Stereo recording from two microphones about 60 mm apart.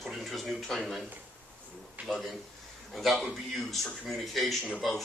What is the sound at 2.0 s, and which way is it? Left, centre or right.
Speech, right.